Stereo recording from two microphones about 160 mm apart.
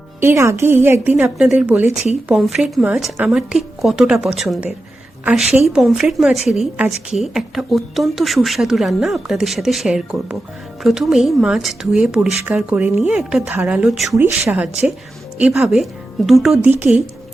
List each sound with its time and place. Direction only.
0.2 s a woman's voice: 15° right (ahead or behind); by 14.2 s centre (ahead or behind)
14.2 s a woman's voice: 10° right (ahead or behind)